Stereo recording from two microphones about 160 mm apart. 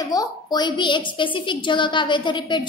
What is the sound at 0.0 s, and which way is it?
A woman's voice, 25° left (ahead or behind).